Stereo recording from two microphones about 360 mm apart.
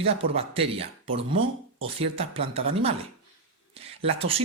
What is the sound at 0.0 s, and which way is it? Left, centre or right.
Speech, centre.